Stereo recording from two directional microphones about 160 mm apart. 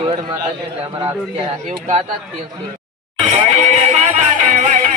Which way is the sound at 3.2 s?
40° right (ahead or behind).